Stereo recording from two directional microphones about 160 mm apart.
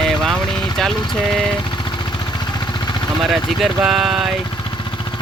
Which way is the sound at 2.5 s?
30° left (ahead or behind).